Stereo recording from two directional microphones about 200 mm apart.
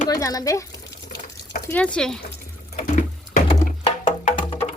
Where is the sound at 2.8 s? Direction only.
40° left (ahead or behind).